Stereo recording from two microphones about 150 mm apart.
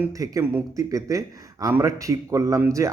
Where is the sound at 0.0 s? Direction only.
25° right (ahead or behind).